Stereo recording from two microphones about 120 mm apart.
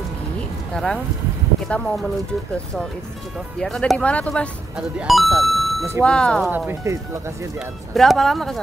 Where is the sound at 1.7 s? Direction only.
10° left (ahead or behind).